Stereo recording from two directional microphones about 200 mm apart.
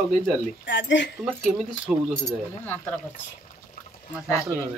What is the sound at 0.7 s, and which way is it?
Speech, 60° left (ahead or behind).